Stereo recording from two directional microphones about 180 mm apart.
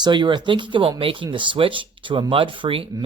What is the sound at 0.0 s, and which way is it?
Speech, 25° right (ahead or behind).